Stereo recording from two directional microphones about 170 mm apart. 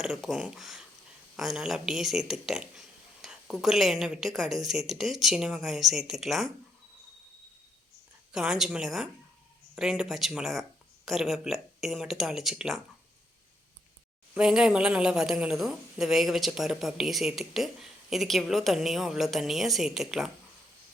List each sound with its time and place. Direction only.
0.0 s a woman's voice: centre (ahead or behind)
8.3 s a woman's voice: 5° right (ahead or behind)
14.3 s a woman's voice: 5° right (ahead or behind)